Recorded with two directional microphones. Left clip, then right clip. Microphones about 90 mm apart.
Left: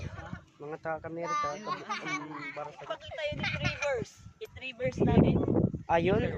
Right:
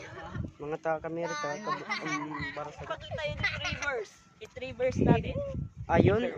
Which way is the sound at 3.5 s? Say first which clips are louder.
Left 1 dB; 25° left (ahead or behind).